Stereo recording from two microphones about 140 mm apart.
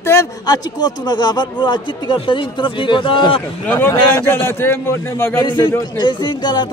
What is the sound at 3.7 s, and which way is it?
Speech, 15° left (ahead or behind).